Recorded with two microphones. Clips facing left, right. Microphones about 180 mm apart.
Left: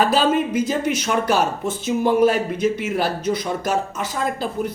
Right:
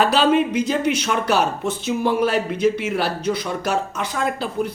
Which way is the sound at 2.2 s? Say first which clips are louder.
Left 1 dB; 50° left (ahead or behind).